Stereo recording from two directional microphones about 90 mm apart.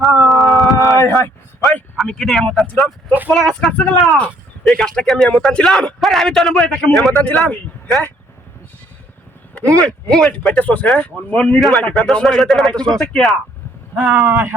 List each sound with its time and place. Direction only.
0.0 s a sound: centre (ahead or behind)
0.9 s speech: 30° left (ahead or behind)
2.0 s speech: 5° left (ahead or behind)
9.8 s speech: 5° left (ahead or behind)
10.6 s speech: 15° left (ahead or behind)
12.1 s speech: 5° left (ahead or behind)
14.1 s speech: 25° right (ahead or behind)